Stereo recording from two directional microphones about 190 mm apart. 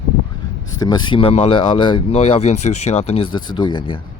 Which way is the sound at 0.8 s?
25° left (ahead or behind).